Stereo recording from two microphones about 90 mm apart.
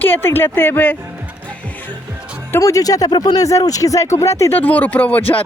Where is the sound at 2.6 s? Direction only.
40° left (ahead or behind).